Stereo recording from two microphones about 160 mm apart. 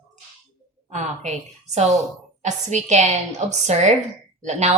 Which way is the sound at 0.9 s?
45° right (ahead or behind).